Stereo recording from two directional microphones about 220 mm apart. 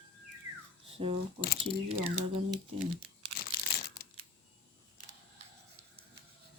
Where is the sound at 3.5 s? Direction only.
45° left (ahead or behind).